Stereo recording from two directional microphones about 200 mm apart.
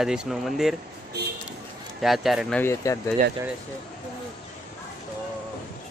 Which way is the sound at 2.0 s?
Centre (ahead or behind).